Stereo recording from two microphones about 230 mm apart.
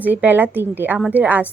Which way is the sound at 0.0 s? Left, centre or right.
Centre.